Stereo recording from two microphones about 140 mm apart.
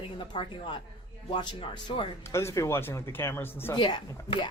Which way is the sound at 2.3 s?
20° left (ahead or behind).